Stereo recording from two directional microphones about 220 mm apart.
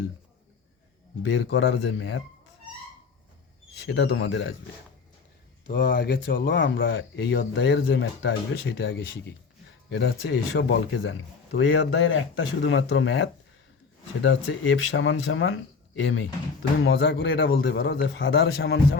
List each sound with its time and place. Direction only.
1.2 s speech: 55° left (ahead or behind)
3.8 s speech: 55° left (ahead or behind)
5.8 s a man's voice: 55° left (ahead or behind)